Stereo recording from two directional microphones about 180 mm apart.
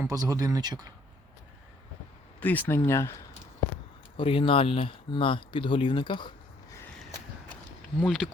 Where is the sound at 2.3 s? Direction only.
10° left (ahead or behind).